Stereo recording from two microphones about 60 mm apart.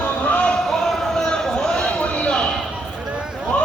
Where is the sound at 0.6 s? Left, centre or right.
Centre.